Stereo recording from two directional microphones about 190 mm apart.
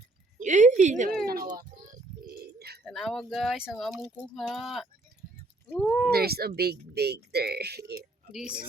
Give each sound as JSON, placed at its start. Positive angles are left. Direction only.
{"t": 0.3, "sound": "a woman's voice", "side_deg": -40}
{"t": 1.2, "sound": "a child's voice", "side_deg": -50}
{"t": 1.5, "sound": "music", "side_deg": -50}
{"t": 2.8, "sound": "speech", "side_deg": 0}
{"t": 6.1, "sound": "speech", "side_deg": -55}
{"t": 8.3, "sound": "speech", "side_deg": -5}